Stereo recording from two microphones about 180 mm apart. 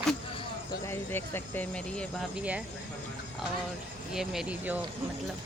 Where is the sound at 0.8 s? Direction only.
15° left (ahead or behind).